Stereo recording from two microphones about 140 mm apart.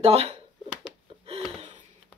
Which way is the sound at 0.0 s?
45° right (ahead or behind).